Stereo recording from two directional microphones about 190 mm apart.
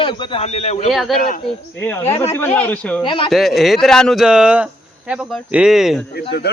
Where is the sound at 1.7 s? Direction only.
10° left (ahead or behind).